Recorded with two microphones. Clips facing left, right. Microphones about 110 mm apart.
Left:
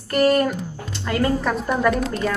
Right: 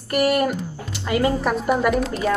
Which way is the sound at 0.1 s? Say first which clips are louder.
Left 2 dB; 10° right (ahead or behind).